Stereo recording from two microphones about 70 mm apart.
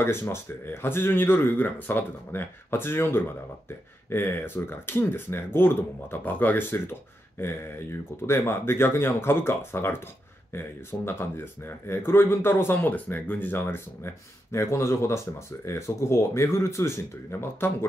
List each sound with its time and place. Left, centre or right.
0.0 s speech: left